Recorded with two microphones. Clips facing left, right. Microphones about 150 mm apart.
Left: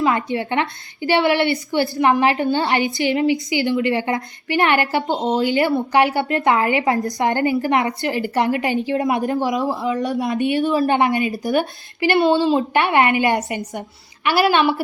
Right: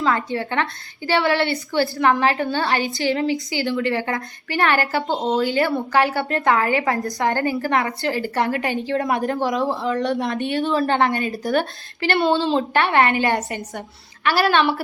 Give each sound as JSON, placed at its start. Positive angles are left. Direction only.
{"t": 0.0, "sound": "a woman's voice", "side_deg": 20}